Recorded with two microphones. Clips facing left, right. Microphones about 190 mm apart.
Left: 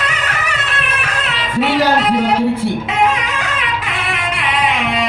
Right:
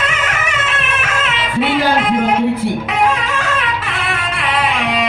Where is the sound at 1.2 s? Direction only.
40° left (ahead or behind).